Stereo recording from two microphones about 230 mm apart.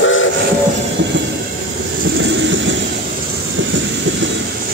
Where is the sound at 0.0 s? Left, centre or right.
Left.